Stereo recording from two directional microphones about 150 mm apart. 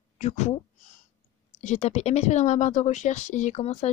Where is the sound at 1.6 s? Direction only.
50° left (ahead or behind).